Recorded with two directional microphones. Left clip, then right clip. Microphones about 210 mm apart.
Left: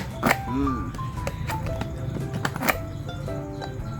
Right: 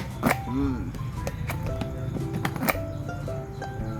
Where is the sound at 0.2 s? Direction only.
15° left (ahead or behind).